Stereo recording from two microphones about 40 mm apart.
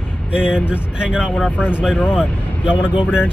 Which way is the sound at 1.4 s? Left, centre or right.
Left.